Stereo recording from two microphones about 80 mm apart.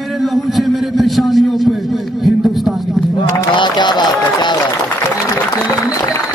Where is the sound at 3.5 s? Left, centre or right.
Left.